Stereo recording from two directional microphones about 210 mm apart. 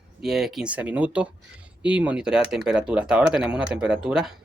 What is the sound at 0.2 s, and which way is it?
Speech, centre (ahead or behind).